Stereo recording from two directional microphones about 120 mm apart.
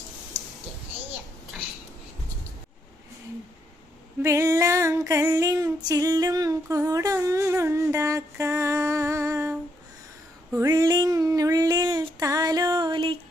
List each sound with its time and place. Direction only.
4.2 s female singing: 25° right (ahead or behind)
10.6 s female singing: 30° right (ahead or behind)